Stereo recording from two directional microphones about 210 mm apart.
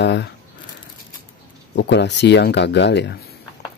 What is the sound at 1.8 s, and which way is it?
Speech, 55° left (ahead or behind).